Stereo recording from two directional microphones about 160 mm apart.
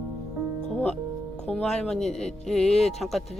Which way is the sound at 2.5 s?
40° left (ahead or behind).